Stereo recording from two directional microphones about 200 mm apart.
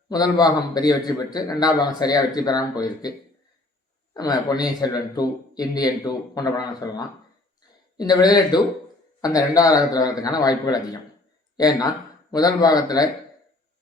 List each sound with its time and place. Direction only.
0.1 s a man's voice: 20° left (ahead or behind)
4.1 s a man's voice: 20° left (ahead or behind)